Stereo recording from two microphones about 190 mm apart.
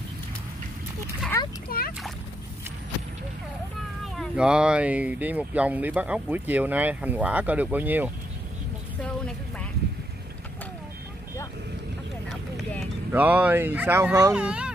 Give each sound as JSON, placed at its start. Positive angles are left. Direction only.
{"t": 1.3, "sound": "splash", "side_deg": 15}
{"t": 1.7, "sound": "a sound", "side_deg": 50}
{"t": 4.0, "sound": "speech", "side_deg": 0}
{"t": 9.0, "sound": "vehicle", "side_deg": 5}
{"t": 12.3, "sound": "speech", "side_deg": 0}